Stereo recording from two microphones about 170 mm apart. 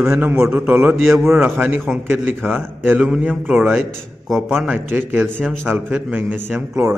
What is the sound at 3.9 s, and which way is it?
A man's voice, centre (ahead or behind).